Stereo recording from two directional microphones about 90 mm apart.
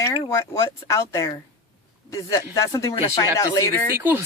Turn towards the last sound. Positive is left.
turn(degrees=-25)  # may be behind; listen again after turning